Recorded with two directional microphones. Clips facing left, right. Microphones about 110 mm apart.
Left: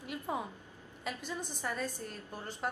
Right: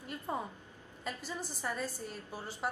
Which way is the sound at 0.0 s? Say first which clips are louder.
Left 1 dB; 5° left (ahead or behind).